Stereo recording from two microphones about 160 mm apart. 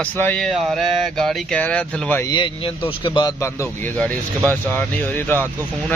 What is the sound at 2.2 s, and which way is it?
A man's voice, 30° left (ahead or behind).